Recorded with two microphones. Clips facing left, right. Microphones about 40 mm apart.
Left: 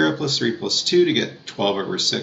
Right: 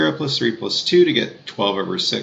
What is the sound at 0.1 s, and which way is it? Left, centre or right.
Speech, right.